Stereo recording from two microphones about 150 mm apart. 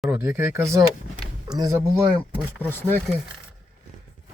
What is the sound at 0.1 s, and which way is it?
Speech, 20° right (ahead or behind).